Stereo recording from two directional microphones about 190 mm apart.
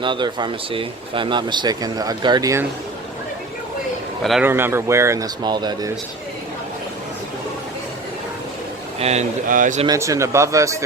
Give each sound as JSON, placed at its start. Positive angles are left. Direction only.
{"t": 0.0, "sound": "speech", "side_deg": -25}
{"t": 4.2, "sound": "a man's voice", "side_deg": 0}
{"t": 4.4, "sound": "speech", "side_deg": -10}
{"t": 9.0, "sound": "speech", "side_deg": -35}
{"t": 9.8, "sound": "speech", "side_deg": -15}